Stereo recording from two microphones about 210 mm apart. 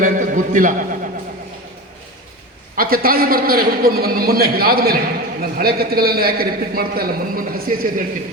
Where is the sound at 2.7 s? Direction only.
45° right (ahead or behind).